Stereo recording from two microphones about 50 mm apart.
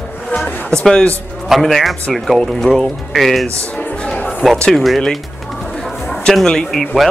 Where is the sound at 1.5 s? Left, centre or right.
Centre.